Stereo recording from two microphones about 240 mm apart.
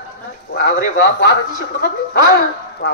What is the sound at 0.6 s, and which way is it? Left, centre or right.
Speech, left.